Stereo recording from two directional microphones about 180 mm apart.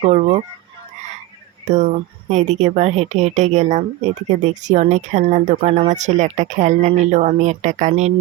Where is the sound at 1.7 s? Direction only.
40° right (ahead or behind).